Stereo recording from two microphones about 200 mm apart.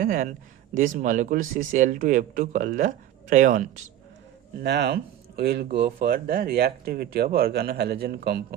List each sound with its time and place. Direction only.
0.0 s speech: 45° right (ahead or behind)
4.6 s speech: 55° right (ahead or behind)